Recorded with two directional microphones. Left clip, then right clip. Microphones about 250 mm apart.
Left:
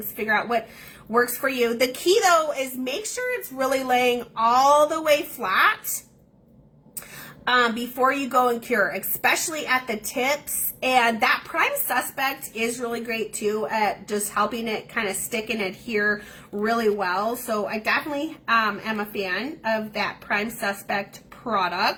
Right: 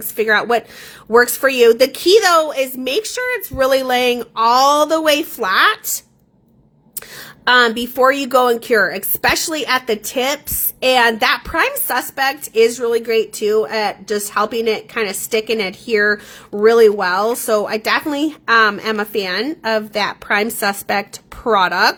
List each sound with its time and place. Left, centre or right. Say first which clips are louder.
0.2 s a woman's voice: right 8 dB; right
7.4 s speech: right 8 dB; right